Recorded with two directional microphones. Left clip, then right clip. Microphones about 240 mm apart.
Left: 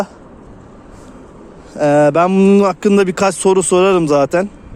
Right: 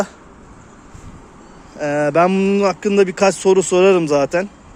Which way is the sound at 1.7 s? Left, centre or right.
Centre.